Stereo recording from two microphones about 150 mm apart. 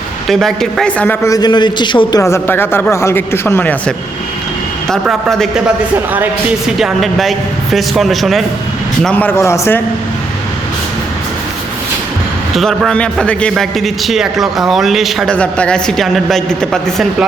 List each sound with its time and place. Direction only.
0.3 s a man's voice: centre (ahead or behind); by 2.2 s 30° left (ahead or behind)
2.2 s a man's voice: 15° left (ahead or behind); by 8.4 s centre (ahead or behind)
9.0 s a man's voice: 10° left (ahead or behind)
12.5 s a man's voice: centre (ahead or behind)